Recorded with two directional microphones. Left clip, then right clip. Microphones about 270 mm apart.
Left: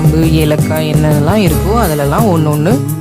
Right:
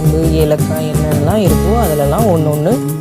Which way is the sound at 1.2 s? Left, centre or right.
Centre.